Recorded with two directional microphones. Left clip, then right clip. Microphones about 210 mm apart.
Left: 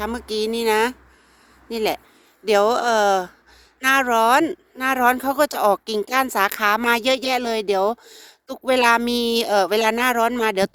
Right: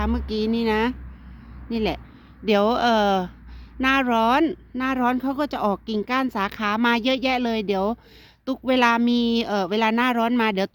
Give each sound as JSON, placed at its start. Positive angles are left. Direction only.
{"t": 0.0, "sound": "speech", "side_deg": 50}